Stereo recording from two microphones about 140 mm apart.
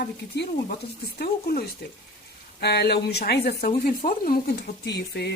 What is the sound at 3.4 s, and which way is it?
Speech, 90° left.